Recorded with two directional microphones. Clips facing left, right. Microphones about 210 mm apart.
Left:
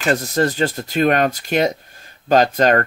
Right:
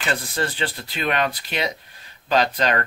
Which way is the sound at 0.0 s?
40° left (ahead or behind).